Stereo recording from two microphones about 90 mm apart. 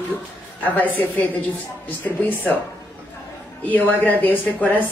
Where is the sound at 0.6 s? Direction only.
20° left (ahead or behind).